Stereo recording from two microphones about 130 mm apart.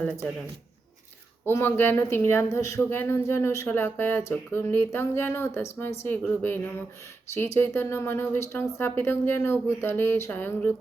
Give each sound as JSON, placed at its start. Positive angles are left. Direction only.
{"t": 1.5, "sound": "a man's voice", "side_deg": 15}